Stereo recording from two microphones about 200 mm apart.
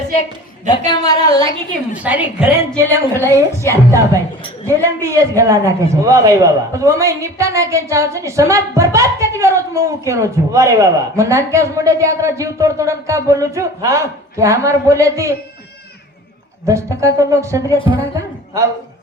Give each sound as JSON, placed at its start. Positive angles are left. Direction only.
{"t": 0.9, "sound": "a woman's voice", "side_deg": 20}
{"t": 1.9, "sound": "a man's voice", "side_deg": -5}
{"t": 16.6, "sound": "a man's voice", "side_deg": -15}